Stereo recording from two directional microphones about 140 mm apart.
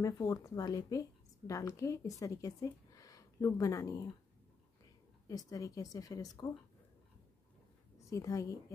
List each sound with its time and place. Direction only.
0.0 s speech: 25° left (ahead or behind)
5.3 s speech: 25° left (ahead or behind)
8.1 s speech: 25° left (ahead or behind)